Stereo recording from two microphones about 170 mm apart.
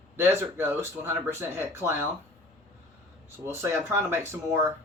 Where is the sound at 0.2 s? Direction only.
15° right (ahead or behind).